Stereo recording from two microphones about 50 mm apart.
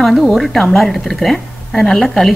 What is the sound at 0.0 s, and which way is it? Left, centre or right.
A woman's voice, centre.